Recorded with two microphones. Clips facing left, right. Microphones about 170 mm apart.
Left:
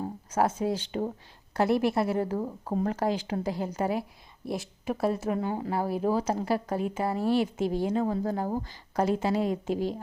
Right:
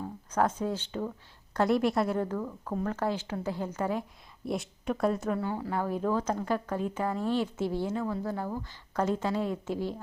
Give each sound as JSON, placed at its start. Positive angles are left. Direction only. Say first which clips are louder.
{"t": 0.3, "sound": "a woman's voice", "louder": "left 2 dB", "side_deg": 10}
{"t": 2.2, "sound": "a woman's voice", "louder": "left 3 dB", "side_deg": 30}
{"t": 2.9, "sound": "speech", "louder": "left 3 dB", "side_deg": 15}
{"t": 4.4, "sound": "a woman's voice", "louder": "even", "side_deg": 0}
{"t": 5.3, "sound": "a woman's voice", "louder": "left 2 dB", "side_deg": 20}
{"t": 8.0, "sound": "speech", "louder": "left 4 dB", "side_deg": 45}
{"t": 9.0, "sound": "speech", "louder": "left 3 dB", "side_deg": 10}